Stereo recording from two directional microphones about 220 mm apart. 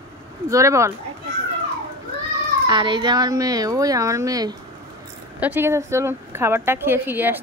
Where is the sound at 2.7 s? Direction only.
20° right (ahead or behind).